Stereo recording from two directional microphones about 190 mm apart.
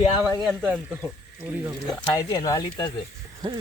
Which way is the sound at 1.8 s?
20° left (ahead or behind).